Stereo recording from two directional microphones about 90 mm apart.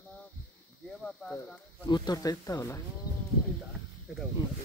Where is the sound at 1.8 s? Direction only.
55° left (ahead or behind).